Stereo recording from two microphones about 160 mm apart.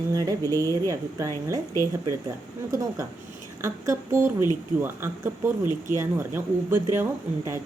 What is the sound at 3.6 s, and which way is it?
Speech, 15° right (ahead or behind).